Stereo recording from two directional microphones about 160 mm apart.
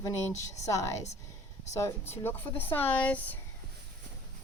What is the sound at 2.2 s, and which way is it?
A woman's voice, 15° left (ahead or behind).